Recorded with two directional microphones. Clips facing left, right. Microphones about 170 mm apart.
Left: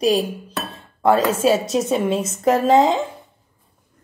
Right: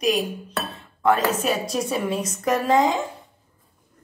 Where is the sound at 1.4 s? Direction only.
25° left (ahead or behind).